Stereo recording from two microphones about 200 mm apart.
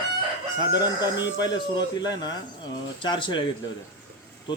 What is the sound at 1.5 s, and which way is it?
Speech, 20° left (ahead or behind).